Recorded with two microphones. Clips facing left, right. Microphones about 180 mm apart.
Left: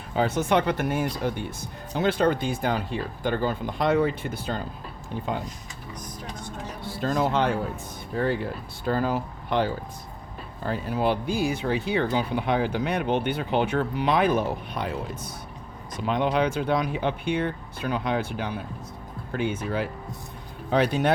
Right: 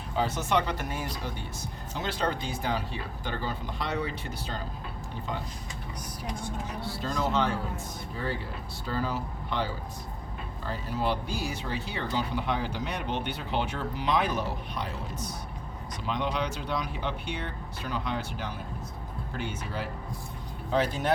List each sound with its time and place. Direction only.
0.2 s speech: 55° left (ahead or behind)
6.8 s speech: 50° left (ahead or behind)
8.8 s speech: 55° left (ahead or behind)
10.7 s speech: 55° left (ahead or behind)
20.7 s speech: 65° left (ahead or behind)